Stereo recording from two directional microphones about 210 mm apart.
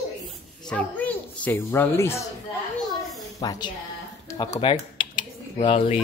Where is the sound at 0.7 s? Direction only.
5° left (ahead or behind).